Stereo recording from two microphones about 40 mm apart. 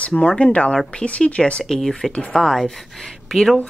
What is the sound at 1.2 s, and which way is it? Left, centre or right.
Speech, left.